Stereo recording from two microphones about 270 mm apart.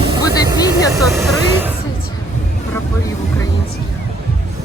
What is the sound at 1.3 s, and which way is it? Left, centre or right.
Vehicle, centre.